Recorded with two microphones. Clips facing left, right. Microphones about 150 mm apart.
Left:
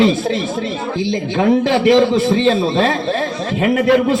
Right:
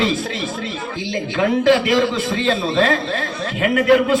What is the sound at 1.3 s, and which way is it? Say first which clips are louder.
A man's voice: left 1 dB; 30° left (ahead or behind).